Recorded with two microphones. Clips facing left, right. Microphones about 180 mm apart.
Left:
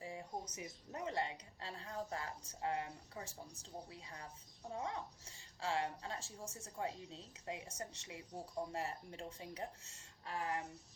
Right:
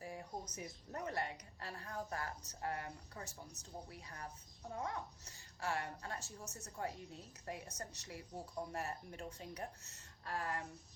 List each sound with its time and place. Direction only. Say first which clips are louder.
0.0 s music: even; 20° left (ahead or behind)
0.5 s a woman's voice: right 1 dB; 20° left (ahead or behind)